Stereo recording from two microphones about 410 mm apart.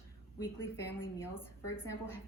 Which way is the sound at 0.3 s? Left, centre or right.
Centre.